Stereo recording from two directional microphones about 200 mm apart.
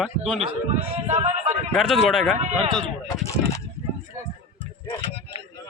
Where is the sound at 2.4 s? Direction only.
30° right (ahead or behind).